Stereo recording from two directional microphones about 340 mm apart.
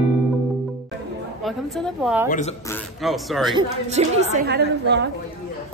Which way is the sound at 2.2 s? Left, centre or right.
Left.